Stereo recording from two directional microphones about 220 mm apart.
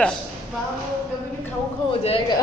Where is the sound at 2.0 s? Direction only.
25° left (ahead or behind).